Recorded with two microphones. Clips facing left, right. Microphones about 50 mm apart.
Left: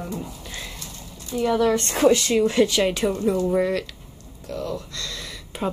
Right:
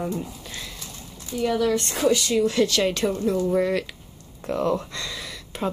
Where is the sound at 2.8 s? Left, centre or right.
Centre.